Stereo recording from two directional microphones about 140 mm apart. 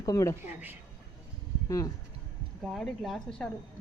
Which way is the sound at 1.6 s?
25° left (ahead or behind).